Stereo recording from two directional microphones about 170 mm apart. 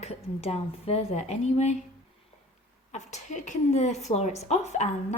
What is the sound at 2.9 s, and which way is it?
A woman's voice, 45° left (ahead or behind).